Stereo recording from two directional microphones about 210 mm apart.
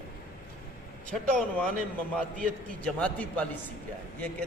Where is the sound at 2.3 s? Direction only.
40° right (ahead or behind).